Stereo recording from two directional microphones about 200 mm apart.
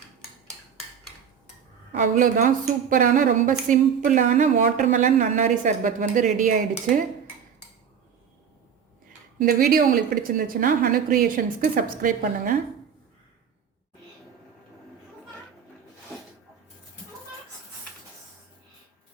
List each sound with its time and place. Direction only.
1.9 s a woman's voice: 40° right (ahead or behind)
9.4 s a woman's voice: 45° right (ahead or behind)